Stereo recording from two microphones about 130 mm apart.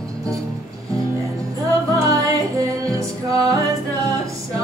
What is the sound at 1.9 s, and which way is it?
Music, 25° right (ahead or behind).